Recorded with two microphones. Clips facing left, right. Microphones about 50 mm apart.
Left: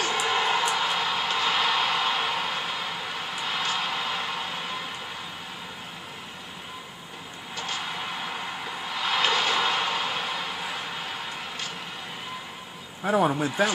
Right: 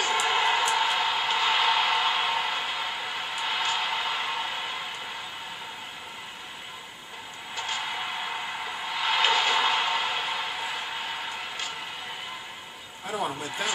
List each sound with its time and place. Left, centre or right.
0.0 s music: centre
7.5 s a sound: centre
13.0 s a man's voice: left